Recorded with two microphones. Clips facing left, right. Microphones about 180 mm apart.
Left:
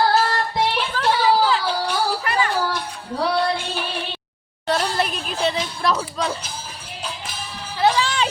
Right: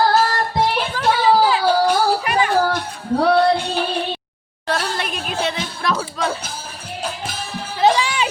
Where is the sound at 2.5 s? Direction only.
55° right (ahead or behind).